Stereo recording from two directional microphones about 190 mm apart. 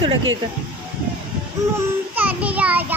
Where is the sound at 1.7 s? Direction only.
10° right (ahead or behind).